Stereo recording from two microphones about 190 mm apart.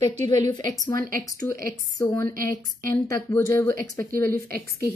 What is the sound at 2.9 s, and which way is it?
Speech, 15° left (ahead or behind).